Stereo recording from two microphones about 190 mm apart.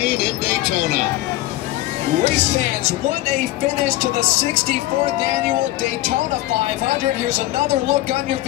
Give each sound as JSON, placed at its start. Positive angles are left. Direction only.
{"t": 2.2, "sound": "speech", "side_deg": -40}
{"t": 7.2, "sound": "speech", "side_deg": -40}